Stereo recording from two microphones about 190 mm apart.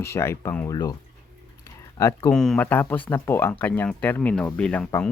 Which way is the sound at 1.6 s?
15° left (ahead or behind).